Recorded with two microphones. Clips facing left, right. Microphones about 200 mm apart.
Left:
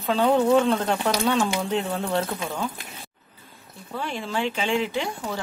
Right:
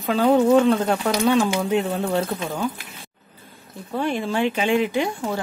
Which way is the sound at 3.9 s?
55° right (ahead or behind).